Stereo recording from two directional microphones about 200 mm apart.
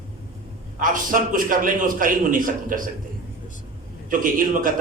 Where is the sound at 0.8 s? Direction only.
45° right (ahead or behind).